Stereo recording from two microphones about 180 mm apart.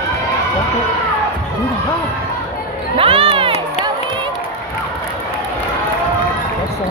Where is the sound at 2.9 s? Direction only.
30° right (ahead or behind).